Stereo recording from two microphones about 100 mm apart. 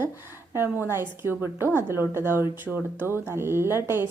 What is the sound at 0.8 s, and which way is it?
A woman's voice, 25° right (ahead or behind).